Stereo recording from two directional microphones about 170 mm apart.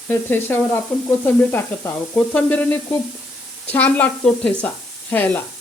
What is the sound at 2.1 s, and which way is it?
Sizzle, 10° left (ahead or behind).